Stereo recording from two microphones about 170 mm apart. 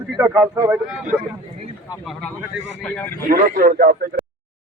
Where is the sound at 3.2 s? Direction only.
55° right (ahead or behind).